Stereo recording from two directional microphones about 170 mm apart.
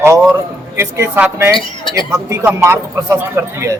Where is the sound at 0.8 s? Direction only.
15° right (ahead or behind).